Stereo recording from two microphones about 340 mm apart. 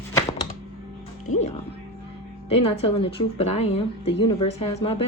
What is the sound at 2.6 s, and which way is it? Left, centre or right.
Mantra, centre.